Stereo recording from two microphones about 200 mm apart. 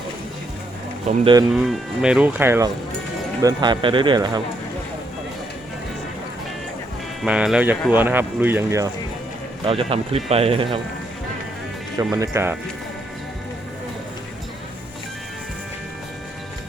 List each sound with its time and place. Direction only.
1.0 s speech: 25° right (ahead or behind)
1.6 s speech: 5° right (ahead or behind)
3.4 s speech: 20° right (ahead or behind)
7.2 s speech: 5° right (ahead or behind)
9.6 s speech: 30° right (ahead or behind)
11.9 s speech: 15° right (ahead or behind)